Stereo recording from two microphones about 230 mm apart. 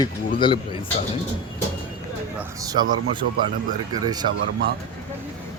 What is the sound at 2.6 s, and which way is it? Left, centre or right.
Speech, centre.